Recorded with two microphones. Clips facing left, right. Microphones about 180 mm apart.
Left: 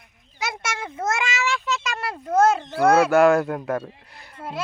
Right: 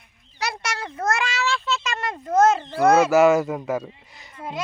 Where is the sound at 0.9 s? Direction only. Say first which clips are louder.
Right 1 dB; 15° left (ahead or behind).